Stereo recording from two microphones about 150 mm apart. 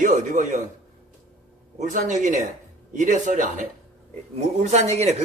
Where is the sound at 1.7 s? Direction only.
55° right (ahead or behind).